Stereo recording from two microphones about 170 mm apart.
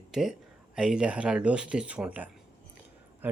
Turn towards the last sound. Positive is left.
turn(degrees=-10)  # may be behind; listen again after turning